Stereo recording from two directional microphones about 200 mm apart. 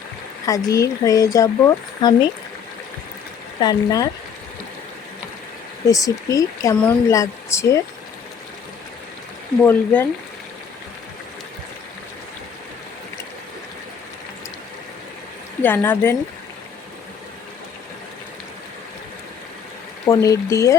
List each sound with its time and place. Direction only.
0.4 s speech: 15° left (ahead or behind)
3.6 s speech: 20° left (ahead or behind)
5.9 s speech: 15° left (ahead or behind)
9.6 s speech: 10° left (ahead or behind)
15.6 s speech: 10° left (ahead or behind)
20.1 s speech: 15° left (ahead or behind)